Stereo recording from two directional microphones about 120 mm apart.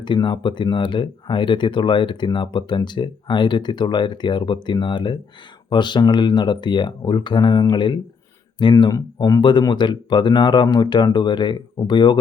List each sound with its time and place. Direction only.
0.0 s speech: 40° left (ahead or behind)